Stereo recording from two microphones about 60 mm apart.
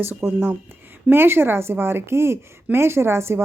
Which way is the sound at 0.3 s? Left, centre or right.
Right.